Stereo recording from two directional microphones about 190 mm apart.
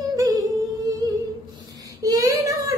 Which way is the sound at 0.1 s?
20° right (ahead or behind).